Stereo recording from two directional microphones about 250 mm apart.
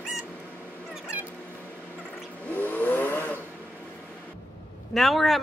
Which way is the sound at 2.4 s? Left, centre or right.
Centre.